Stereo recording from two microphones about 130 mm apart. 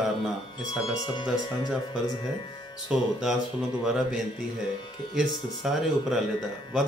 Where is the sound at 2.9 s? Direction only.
5° right (ahead or behind).